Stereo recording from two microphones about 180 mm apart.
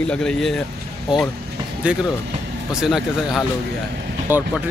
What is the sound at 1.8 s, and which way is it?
A man's voice, 5° right (ahead or behind).